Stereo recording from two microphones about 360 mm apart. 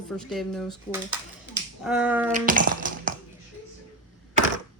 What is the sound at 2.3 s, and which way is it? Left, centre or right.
Music, right.